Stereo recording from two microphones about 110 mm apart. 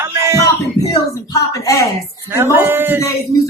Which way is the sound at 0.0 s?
25° right (ahead or behind).